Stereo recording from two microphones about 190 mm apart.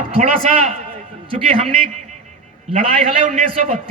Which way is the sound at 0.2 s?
35° right (ahead or behind).